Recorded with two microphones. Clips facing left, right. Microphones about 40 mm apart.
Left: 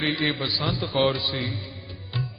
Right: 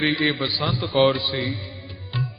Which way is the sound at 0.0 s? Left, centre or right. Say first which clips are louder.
Right 4 dB; centre.